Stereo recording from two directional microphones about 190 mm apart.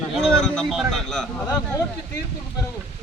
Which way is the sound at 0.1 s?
Centre (ahead or behind).